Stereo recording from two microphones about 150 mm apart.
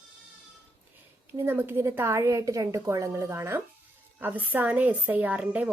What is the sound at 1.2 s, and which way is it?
A woman's voice, 15° right (ahead or behind).